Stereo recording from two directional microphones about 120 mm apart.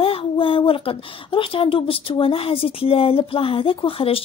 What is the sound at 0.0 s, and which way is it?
Speech, 50° left (ahead or behind).